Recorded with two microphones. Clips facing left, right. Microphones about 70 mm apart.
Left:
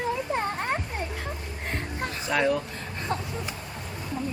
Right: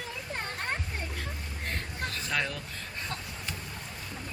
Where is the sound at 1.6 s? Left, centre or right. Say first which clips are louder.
Left 4 dB; centre.